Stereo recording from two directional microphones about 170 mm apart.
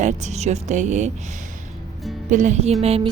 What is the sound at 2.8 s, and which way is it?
Music, 35° right (ahead or behind).